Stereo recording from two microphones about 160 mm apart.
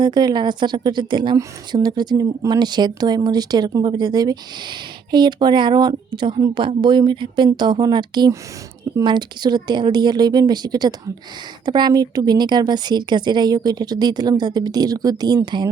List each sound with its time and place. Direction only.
0.0 s a woman's voice: 25° right (ahead or behind)